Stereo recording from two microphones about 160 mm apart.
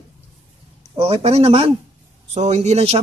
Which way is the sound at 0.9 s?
40° right (ahead or behind).